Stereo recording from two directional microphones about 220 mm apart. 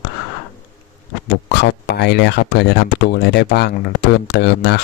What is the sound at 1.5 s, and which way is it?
Speech, 50° left (ahead or behind).